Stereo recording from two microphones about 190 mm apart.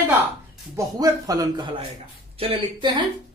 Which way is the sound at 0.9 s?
20° right (ahead or behind).